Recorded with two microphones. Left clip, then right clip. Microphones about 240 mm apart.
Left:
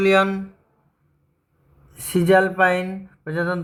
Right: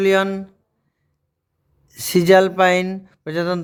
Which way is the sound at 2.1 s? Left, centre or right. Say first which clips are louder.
Right 3 dB; right.